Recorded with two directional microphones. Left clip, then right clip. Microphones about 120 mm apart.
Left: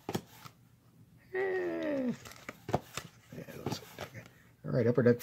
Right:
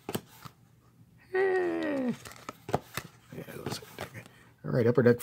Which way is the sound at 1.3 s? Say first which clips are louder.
Right 6 dB; 30° right (ahead or behind).